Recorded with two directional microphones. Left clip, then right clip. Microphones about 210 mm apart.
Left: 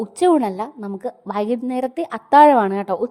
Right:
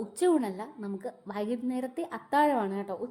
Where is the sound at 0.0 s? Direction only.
35° left (ahead or behind).